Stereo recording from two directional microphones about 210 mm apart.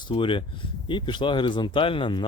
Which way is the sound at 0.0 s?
25° left (ahead or behind).